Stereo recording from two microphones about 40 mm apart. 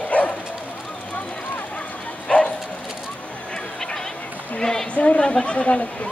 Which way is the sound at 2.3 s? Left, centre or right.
Left.